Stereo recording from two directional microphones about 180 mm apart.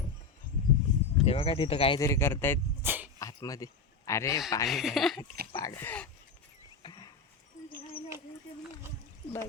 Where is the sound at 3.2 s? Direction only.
20° left (ahead or behind).